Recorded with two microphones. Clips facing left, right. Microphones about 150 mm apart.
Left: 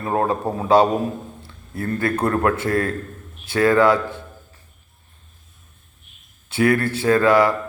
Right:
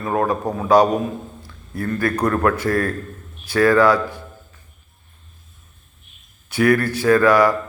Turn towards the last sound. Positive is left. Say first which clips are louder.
# right 1 dB
turn(degrees=25)  # may be behind; listen again after turning